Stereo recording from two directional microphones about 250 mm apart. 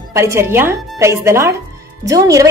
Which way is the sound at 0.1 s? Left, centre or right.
Centre.